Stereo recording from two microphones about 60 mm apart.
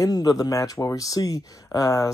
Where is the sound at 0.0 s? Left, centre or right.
Left.